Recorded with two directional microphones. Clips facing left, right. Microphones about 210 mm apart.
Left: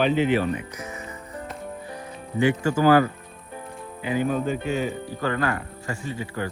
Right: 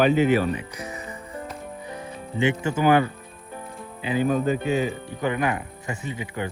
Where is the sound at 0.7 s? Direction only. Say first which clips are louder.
Right 1 dB; 35° right (ahead or behind).